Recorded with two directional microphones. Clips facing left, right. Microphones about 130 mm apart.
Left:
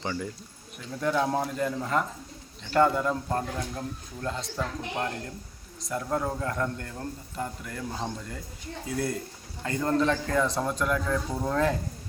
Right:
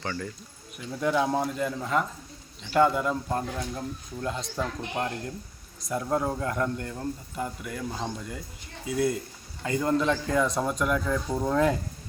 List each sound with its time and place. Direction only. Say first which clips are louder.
0.0 s speech: left 1 dB; 15° left (ahead or behind)
1.0 s a man's voice: right 1 dB; 5° right (ahead or behind)
3.8 s speech: right 1 dB; 15° right (ahead or behind)